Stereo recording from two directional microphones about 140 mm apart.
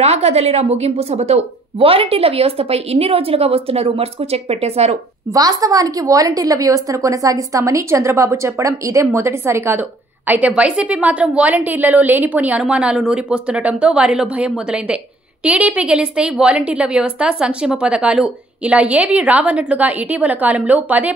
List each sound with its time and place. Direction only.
0.0 s a woman's voice: 50° right (ahead or behind)
5.3 s a woman's voice: 25° right (ahead or behind)